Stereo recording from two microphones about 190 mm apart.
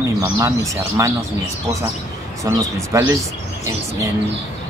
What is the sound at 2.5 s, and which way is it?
Speech, 15° right (ahead or behind).